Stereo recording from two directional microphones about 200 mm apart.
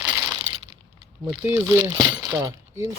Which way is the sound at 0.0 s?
10° right (ahead or behind).